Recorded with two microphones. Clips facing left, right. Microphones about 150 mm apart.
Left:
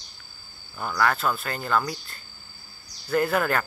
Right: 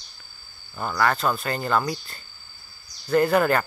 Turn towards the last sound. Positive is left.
turn(degrees=0)  # may be behind; listen again after turning